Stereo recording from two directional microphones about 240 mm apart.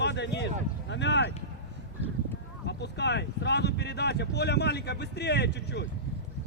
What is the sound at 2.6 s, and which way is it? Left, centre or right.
Speech, left.